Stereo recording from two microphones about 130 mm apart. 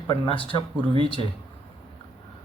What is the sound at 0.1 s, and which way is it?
Speech, 40° left (ahead or behind).